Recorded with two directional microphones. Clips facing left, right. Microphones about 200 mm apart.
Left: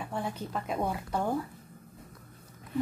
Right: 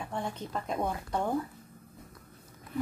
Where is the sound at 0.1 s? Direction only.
5° left (ahead or behind).